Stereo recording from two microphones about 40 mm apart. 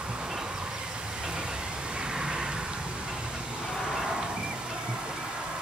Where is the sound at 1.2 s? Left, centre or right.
Right.